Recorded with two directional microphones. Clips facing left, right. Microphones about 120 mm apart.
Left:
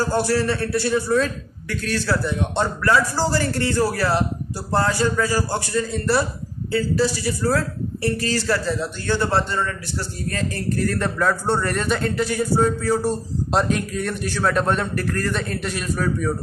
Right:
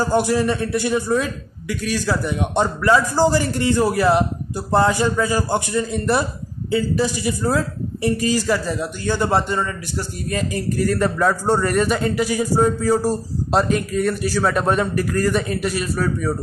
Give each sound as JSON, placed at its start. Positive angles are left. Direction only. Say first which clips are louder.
{"t": 0.0, "sound": "a man's voice", "louder": "right 2 dB", "side_deg": -15}
{"t": 13.5, "sound": "a man's voice", "louder": "right 3 dB", "side_deg": 0}